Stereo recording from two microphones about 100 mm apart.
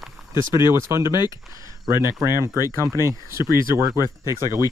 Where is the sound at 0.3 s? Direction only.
25° right (ahead or behind).